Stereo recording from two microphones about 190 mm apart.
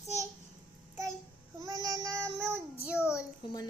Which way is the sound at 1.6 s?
20° right (ahead or behind).